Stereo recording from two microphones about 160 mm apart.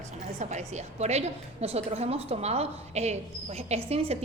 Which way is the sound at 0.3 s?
45° right (ahead or behind).